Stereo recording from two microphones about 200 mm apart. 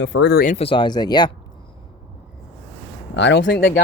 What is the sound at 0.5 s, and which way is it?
Speech, 25° left (ahead or behind).